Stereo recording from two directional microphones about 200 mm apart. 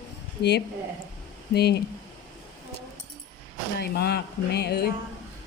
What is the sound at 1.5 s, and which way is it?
Speech, 55° left (ahead or behind).